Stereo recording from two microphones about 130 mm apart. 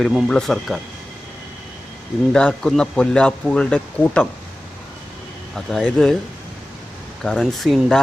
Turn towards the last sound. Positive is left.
turn(degrees=0)  # may be behind; listen again after turning